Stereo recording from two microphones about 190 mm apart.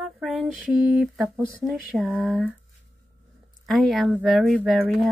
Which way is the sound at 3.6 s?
Centre (ahead or behind).